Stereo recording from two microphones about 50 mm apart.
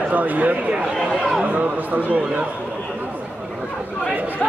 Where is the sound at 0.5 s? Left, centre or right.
Right.